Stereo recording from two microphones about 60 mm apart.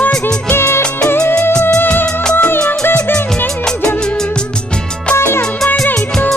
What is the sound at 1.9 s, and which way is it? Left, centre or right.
Music, centre.